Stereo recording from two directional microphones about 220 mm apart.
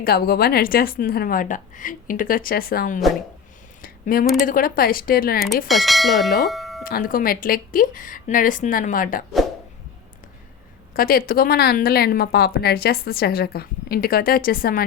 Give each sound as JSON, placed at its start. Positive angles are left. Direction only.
{"t": 0.0, "sound": "a woman's voice", "side_deg": 45}
{"t": 3.8, "sound": "a sound", "side_deg": 40}
{"t": 4.4, "sound": "a woman's voice", "side_deg": 40}
{"t": 5.6, "sound": "bell", "side_deg": 0}
{"t": 6.4, "sound": "doorbell", "side_deg": 0}
{"t": 6.8, "sound": "a woman's voice", "side_deg": 40}
{"t": 10.9, "sound": "a woman's voice", "side_deg": 40}